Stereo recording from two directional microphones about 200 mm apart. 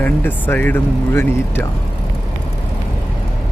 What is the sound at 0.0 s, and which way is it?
Speech, 10° left (ahead or behind).